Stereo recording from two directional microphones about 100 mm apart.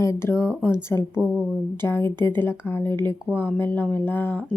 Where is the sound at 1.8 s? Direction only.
25° left (ahead or behind).